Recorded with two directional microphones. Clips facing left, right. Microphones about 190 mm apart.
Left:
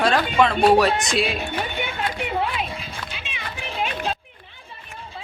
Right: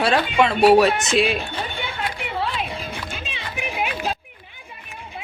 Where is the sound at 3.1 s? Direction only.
35° right (ahead or behind).